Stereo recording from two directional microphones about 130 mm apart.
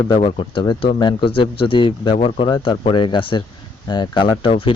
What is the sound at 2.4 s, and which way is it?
Speech, 40° left (ahead or behind).